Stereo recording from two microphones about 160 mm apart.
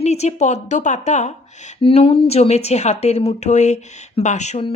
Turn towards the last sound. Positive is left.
turn(degrees=45)  # may be behind; listen again after turning